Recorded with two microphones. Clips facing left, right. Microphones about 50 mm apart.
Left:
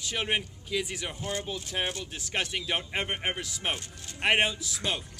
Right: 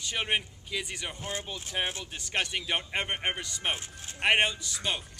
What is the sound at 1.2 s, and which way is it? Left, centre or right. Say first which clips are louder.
Speech: left 4 dB; right.